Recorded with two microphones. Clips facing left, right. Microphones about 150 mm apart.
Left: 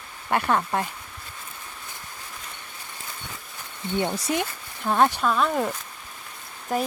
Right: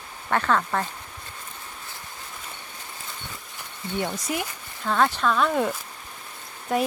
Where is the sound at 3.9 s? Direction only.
25° left (ahead or behind).